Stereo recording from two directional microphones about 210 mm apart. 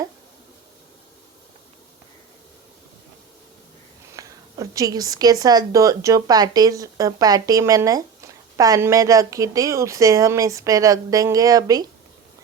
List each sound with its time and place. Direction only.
4.1 s speech: 15° right (ahead or behind)